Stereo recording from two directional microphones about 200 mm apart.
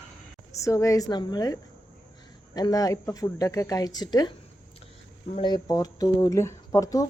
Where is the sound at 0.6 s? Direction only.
15° left (ahead or behind).